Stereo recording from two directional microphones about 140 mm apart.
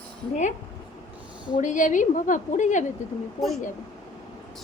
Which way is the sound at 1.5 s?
65° left (ahead or behind).